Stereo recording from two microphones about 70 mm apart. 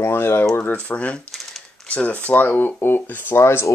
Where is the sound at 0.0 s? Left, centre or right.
Left.